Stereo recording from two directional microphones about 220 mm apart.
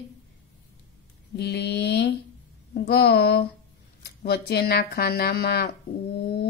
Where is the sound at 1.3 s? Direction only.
50° left (ahead or behind).